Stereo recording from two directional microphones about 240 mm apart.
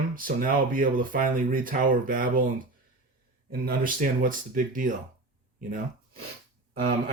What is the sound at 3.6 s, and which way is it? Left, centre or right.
Speech, right.